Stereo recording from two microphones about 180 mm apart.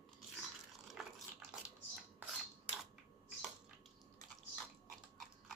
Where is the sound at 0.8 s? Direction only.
5° right (ahead or behind).